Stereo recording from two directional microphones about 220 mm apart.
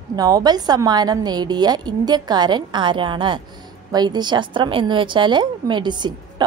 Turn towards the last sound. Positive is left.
turn(degrees=-20)  # may be behind; listen again after turning